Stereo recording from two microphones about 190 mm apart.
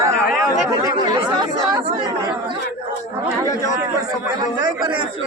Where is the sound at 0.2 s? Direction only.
Centre (ahead or behind).